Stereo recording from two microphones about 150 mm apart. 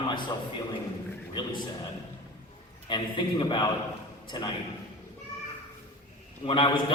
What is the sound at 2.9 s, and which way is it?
Speech, 30° left (ahead or behind).